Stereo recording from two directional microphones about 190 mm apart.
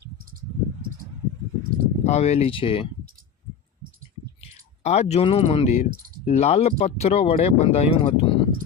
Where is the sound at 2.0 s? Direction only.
35° left (ahead or behind).